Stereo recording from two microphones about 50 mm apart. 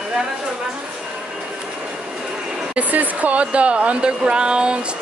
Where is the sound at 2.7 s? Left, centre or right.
Right.